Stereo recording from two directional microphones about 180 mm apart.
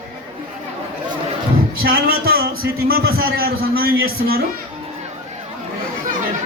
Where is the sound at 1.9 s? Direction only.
55° right (ahead or behind).